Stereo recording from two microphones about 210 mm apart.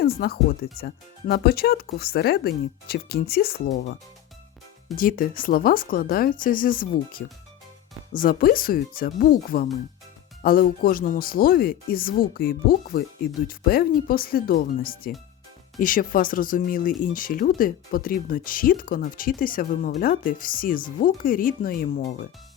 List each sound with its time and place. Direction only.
0.0 s speech: 45° left (ahead or behind)
4.9 s speech: 40° left (ahead or behind)